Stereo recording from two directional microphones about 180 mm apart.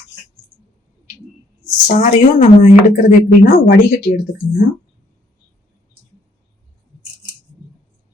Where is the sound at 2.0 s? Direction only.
40° left (ahead or behind).